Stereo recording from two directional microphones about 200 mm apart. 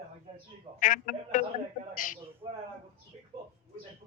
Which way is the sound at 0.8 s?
40° left (ahead or behind).